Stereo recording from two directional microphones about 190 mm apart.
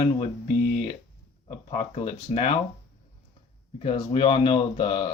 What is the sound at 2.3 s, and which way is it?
Speech, 30° left (ahead or behind).